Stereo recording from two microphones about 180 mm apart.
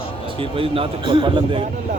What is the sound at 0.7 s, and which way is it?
Speech, 30° right (ahead or behind).